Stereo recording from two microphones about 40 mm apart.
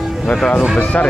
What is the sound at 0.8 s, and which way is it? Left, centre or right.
Speech, left.